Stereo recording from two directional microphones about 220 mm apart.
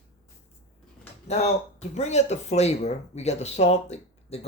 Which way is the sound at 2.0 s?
30° left (ahead or behind).